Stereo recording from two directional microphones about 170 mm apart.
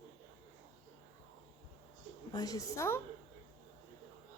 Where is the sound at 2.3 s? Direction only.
20° left (ahead or behind).